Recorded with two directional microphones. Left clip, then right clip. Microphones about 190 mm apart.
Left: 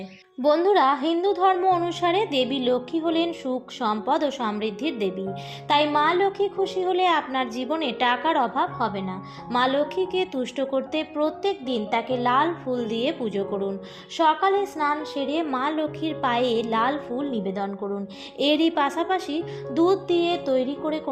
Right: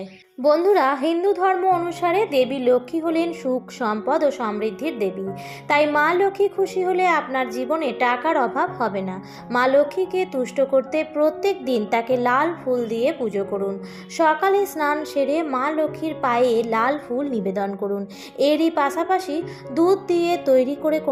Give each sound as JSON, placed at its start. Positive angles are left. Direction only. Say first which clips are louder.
{"t": 0.4, "sound": "a woman's voice", "louder": "right 2 dB", "side_deg": 30}
{"t": 5.6, "sound": "a woman's voice", "louder": "right 2 dB", "side_deg": 30}
{"t": 6.9, "sound": "a woman's voice", "louder": "right 2 dB", "side_deg": 35}
{"t": 9.5, "sound": "a woman's voice", "louder": "right 5 dB", "side_deg": 25}
{"t": 14.2, "sound": "a woman's voice", "louder": "right 2 dB", "side_deg": 15}
{"t": 15.3, "sound": "a woman's voice", "louder": "right 3 dB", "side_deg": 25}
{"t": 18.3, "sound": "a woman's voice", "louder": "right 3 dB", "side_deg": 35}